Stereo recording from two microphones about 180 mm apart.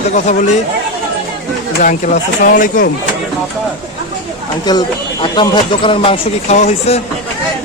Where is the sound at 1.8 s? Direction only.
45° left (ahead or behind).